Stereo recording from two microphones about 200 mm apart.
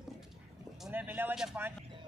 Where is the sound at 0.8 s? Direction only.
10° right (ahead or behind).